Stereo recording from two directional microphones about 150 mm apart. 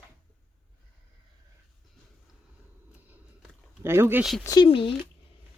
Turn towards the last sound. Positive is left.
turn(degrees=35)  # may be behind; listen again after turning